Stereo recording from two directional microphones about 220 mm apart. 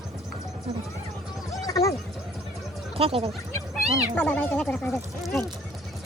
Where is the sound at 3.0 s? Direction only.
25° right (ahead or behind).